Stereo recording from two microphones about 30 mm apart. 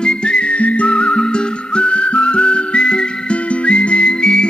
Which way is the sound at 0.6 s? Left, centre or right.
Left.